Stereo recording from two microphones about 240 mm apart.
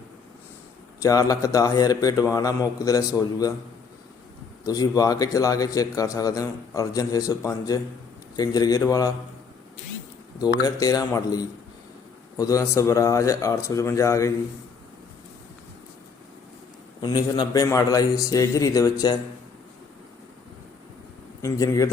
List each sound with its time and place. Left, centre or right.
1.0 s a man's voice: centre
4.6 s a man's voice: centre
10.6 s a man's voice: centre
17.0 s a man's voice: centre
21.4 s a man's voice: centre